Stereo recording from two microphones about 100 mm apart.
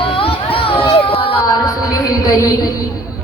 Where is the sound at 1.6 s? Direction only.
40° left (ahead or behind).